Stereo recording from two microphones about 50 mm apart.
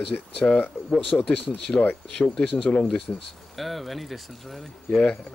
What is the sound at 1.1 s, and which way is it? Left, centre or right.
Speech, left.